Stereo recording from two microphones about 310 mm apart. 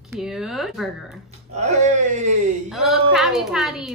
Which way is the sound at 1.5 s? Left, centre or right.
Right.